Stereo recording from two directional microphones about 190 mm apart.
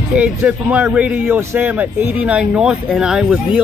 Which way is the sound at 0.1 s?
5° right (ahead or behind).